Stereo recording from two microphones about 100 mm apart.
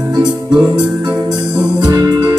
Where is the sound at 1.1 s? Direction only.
40° right (ahead or behind).